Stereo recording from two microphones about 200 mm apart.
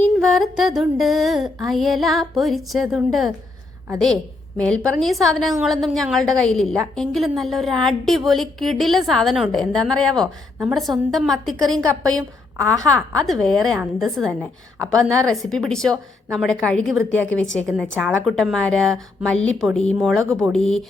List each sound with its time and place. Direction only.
0.0 s a woman's voice: centre (ahead or behind)